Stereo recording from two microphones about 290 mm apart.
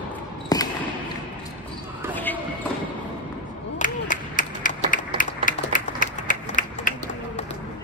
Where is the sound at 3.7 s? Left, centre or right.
Left.